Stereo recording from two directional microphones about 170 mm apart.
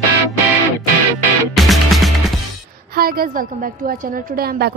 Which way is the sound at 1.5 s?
Centre (ahead or behind).